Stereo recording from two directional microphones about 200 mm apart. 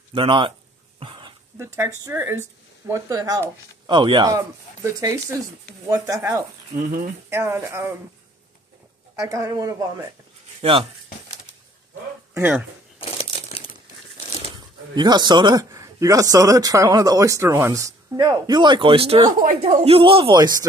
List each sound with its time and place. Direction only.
0.1 s a man's voice: 25° right (ahead or behind)
0.9 s dog: 25° right (ahead or behind)
1.6 s a man's voice: 15° right (ahead or behind)
6.8 s speech: 40° right (ahead or behind)
7.2 s speech: 10° right (ahead or behind)
9.2 s speech: 15° right (ahead or behind)
10.6 s speech: 25° right (ahead or behind)
12.4 s speech: 10° right (ahead or behind)
13.0 s crumpling: 30° left (ahead or behind)
15.0 s a man's voice: 20° right (ahead or behind)